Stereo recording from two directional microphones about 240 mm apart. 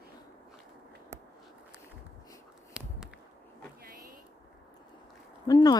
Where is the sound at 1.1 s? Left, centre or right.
Centre.